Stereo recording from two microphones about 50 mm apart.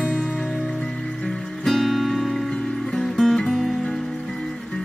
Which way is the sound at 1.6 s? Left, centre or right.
Centre.